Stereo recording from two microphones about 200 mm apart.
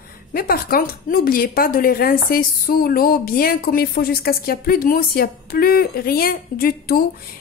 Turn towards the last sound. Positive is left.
turn(degrees=50)  # may be behind; listen again after turning